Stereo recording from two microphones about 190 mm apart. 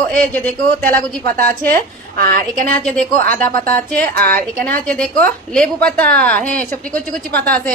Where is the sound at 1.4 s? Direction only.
50° right (ahead or behind).